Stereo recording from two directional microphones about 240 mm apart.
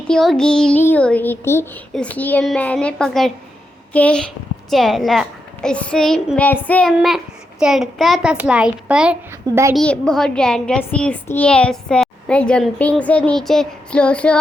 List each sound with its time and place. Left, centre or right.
0.1 s a child's voice: centre